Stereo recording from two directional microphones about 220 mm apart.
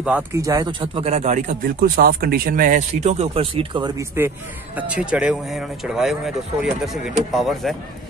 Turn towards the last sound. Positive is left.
turn(degrees=0)  # may be behind; listen again after turning